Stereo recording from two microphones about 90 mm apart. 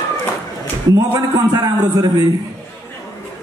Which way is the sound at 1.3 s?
45° right (ahead or behind).